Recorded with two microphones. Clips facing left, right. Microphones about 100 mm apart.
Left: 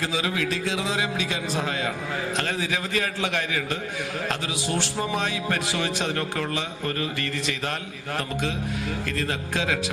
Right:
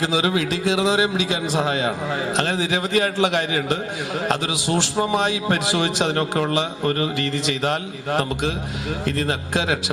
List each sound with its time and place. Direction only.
0.0 s a man's voice: 20° right (ahead or behind)
4.4 s a man's voice: 90° right
4.7 s a man's voice: 20° right (ahead or behind)
6.5 s a man's voice: 65° right (ahead or behind)
7.6 s a man's voice: 20° right (ahead or behind)
9.5 s a man's voice: 20° right (ahead or behind)